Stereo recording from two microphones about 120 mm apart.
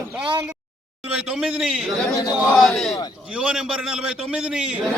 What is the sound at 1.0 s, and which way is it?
A man's voice, 10° right (ahead or behind).